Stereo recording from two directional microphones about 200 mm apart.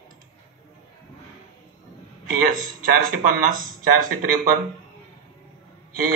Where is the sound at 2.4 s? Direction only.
45° right (ahead or behind).